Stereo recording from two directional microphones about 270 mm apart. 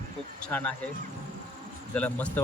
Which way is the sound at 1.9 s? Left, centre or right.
Centre.